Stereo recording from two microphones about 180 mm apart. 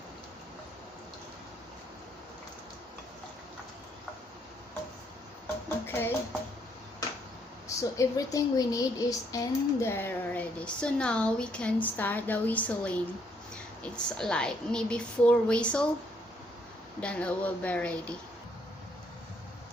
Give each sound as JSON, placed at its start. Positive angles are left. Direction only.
{"t": 5.8, "sound": "speech", "side_deg": 10}
{"t": 7.8, "sound": "a woman's voice", "side_deg": 20}
{"t": 17.0, "sound": "speech", "side_deg": 5}